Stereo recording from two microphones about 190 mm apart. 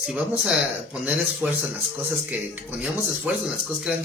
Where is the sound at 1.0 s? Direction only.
10° right (ahead or behind).